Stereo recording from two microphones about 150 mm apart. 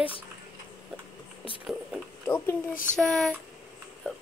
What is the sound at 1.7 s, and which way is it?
Speech, 5° right (ahead or behind).